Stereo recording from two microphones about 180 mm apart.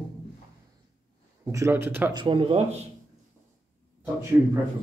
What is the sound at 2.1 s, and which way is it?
Speech, 25° right (ahead or behind).